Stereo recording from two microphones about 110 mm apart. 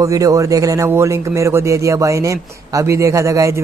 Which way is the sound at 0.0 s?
30° right (ahead or behind).